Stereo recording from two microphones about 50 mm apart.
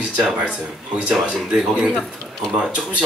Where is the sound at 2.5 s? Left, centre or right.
Right.